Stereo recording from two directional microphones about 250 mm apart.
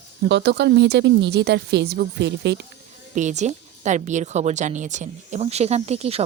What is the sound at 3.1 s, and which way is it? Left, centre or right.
A woman's voice, right.